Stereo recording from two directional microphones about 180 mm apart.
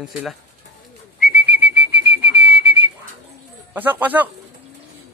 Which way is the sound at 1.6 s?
65° right (ahead or behind).